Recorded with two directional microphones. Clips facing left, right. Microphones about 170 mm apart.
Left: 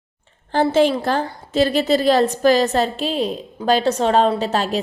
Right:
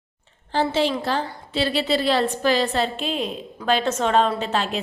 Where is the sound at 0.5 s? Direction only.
50° left (ahead or behind).